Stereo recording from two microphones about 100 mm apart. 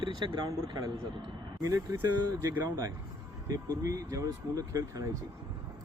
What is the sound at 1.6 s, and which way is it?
Speech, 35° right (ahead or behind).